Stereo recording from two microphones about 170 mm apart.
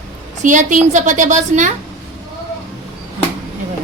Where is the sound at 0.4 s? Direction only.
50° right (ahead or behind).